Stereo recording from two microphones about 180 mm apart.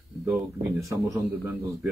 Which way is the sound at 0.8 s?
15° right (ahead or behind).